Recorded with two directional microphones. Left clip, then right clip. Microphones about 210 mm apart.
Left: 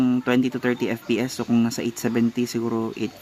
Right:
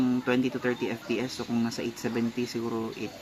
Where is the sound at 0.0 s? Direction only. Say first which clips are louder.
Left 5 dB; 50° left (ahead or behind).